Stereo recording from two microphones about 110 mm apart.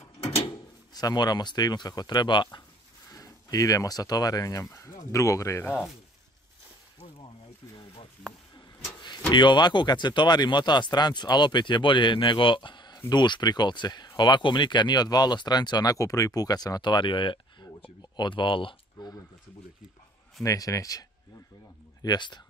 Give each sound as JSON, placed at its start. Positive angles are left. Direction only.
{"t": 0.9, "sound": "speech", "side_deg": 35}
{"t": 3.1, "sound": "speech", "side_deg": 30}
{"t": 7.7, "sound": "a sound", "side_deg": 55}
{"t": 9.3, "sound": "speech", "side_deg": 45}
{"t": 20.4, "sound": "speech", "side_deg": 30}
{"t": 22.0, "sound": "speech", "side_deg": 40}